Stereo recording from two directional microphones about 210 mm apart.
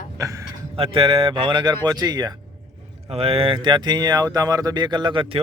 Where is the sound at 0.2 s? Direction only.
15° right (ahead or behind).